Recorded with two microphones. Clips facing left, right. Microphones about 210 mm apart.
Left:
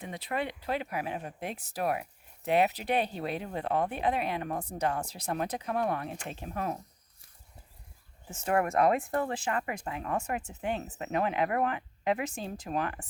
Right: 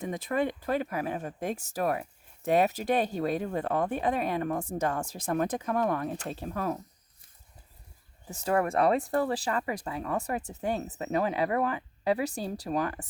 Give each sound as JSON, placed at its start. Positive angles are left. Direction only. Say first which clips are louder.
{"t": 0.0, "sound": "speech", "louder": "right 5 dB", "side_deg": -45}
{"t": 8.3, "sound": "speech", "louder": "right 1 dB", "side_deg": -35}